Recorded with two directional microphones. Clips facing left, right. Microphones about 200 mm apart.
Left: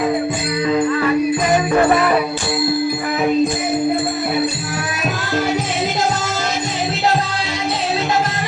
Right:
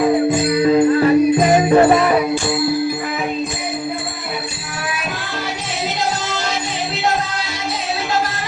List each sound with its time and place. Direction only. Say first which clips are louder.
0.6 s music: right 3 dB; 35° right (ahead or behind)